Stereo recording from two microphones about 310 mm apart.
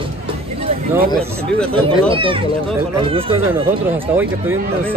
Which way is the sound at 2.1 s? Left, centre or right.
Centre.